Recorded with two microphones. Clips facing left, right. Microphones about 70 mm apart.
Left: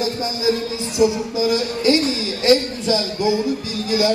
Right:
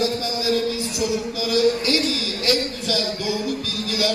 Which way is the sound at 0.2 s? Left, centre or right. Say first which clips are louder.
Left 2 dB; left.